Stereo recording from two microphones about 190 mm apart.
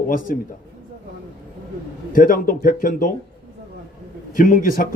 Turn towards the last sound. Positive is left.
turn(degrees=45)  # may be behind; listen again after turning